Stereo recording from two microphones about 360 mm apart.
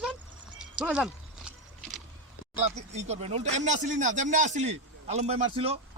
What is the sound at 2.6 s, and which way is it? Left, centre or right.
A man's voice, centre.